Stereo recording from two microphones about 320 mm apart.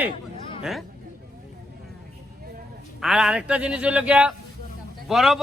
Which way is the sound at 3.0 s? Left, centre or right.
Centre.